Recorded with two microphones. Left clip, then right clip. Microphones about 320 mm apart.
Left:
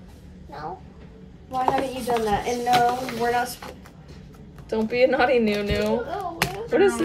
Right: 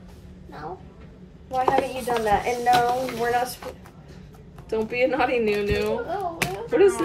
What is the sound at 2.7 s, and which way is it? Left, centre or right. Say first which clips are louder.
Speech: left 1 dB; centre.